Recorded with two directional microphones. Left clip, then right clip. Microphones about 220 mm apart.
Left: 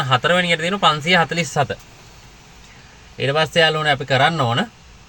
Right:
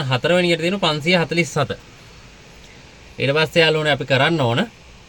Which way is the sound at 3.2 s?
10° left (ahead or behind).